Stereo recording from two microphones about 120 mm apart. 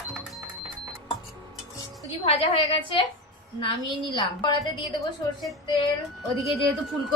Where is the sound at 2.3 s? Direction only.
55° left (ahead or behind).